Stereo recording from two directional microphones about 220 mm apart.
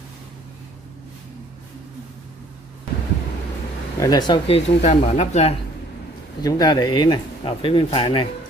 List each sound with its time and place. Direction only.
4.0 s speech: 20° left (ahead or behind)
6.4 s speech: 15° left (ahead or behind)